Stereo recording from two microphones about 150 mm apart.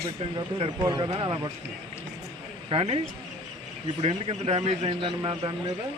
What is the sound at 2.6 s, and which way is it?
Speech, 40° right (ahead or behind).